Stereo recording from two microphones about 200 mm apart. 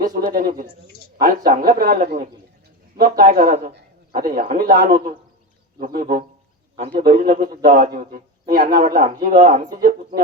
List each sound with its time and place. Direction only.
0.1 s a man's voice: 45° right (ahead or behind)